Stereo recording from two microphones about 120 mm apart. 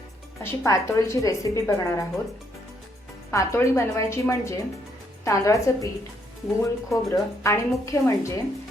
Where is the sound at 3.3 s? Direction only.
25° left (ahead or behind).